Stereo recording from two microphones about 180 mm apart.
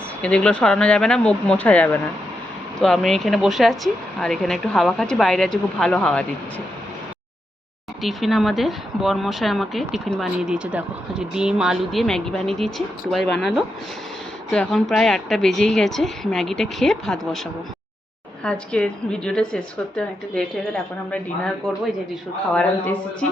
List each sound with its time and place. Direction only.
0.2 s a woman's voice: 5° left (ahead or behind)
8.0 s a woman's voice: centre (ahead or behind)
14.5 s a woman's voice: 5° left (ahead or behind)
18.4 s a woman's voice: 5° left (ahead or behind)